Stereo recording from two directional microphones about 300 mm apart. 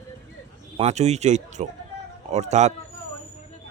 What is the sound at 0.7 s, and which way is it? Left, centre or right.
Speech, right.